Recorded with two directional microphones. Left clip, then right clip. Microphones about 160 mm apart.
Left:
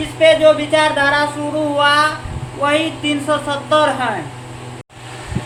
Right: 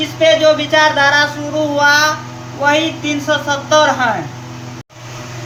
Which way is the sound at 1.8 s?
20° left (ahead or behind).